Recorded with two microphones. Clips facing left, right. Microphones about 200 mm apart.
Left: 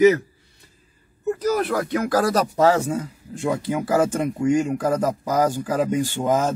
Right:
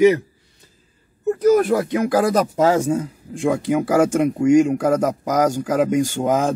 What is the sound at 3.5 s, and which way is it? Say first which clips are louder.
Speech: right 4 dB; 10° right (ahead or behind).